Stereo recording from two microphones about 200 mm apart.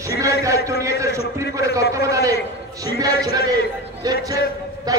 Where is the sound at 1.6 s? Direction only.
15° right (ahead or behind).